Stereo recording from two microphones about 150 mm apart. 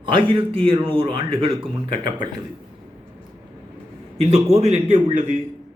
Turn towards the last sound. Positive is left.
turn(degrees=-50)  # may be behind; listen again after turning